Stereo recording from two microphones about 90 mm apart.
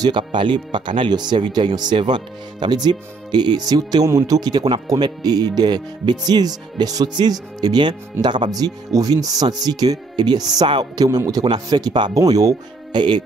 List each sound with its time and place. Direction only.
0.0 s speech: 60° right (ahead or behind); by 13.0 s 45° right (ahead or behind)